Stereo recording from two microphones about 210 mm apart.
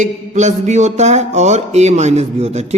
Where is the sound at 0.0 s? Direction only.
35° right (ahead or behind).